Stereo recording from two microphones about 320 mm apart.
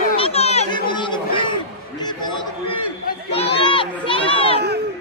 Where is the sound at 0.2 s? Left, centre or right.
Centre.